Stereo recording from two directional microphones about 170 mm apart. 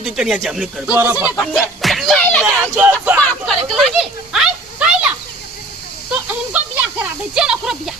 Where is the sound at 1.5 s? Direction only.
Centre (ahead or behind).